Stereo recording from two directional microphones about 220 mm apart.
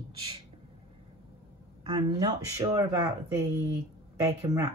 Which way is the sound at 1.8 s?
20° right (ahead or behind).